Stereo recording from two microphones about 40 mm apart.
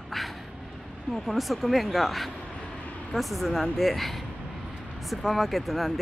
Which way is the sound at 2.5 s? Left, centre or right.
Left.